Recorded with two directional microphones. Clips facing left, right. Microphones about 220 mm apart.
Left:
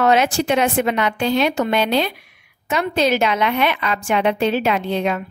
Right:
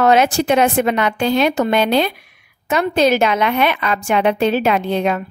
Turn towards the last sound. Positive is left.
turn(degrees=-45)  # may be behind; listen again after turning